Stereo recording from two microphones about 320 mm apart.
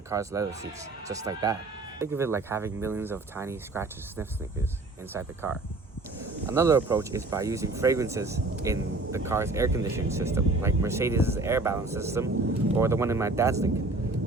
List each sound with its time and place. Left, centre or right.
0.1 s speech: centre